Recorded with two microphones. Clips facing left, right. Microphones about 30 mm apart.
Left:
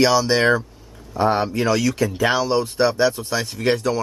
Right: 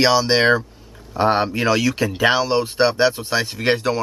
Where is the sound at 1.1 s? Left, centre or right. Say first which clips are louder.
Right 1 dB; right.